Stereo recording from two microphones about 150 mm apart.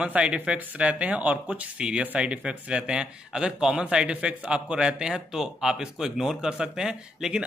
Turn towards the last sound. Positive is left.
turn(degrees=-5)  # may be behind; listen again after turning